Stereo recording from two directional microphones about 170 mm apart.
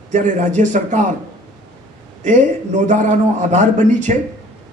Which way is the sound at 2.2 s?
45° right (ahead or behind).